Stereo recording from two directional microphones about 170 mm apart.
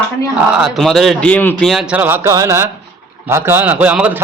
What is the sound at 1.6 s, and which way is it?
A man's voice, centre (ahead or behind).